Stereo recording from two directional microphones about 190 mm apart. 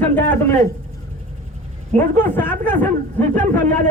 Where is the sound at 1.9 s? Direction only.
10° left (ahead or behind).